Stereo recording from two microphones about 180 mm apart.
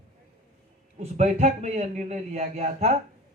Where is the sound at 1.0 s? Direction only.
40° right (ahead or behind).